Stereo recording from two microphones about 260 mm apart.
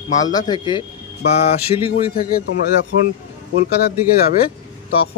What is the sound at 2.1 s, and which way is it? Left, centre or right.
Speech, left.